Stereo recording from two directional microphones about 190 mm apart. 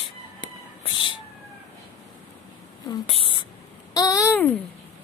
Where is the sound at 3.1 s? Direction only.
30° left (ahead or behind).